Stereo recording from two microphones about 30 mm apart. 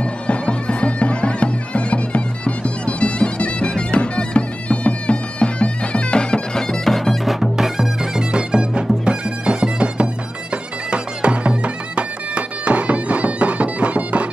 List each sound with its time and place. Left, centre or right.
0.0 s bagpipes: left
6.8 s music: centre
7.5 s music: centre
8.0 s bagpipes: right